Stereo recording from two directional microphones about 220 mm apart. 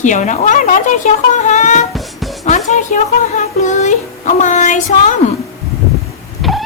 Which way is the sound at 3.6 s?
35° left (ahead or behind).